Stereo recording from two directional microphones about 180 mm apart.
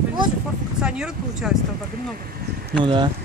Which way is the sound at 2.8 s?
25° right (ahead or behind).